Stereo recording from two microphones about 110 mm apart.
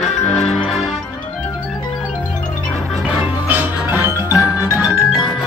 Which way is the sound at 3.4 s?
20° right (ahead or behind).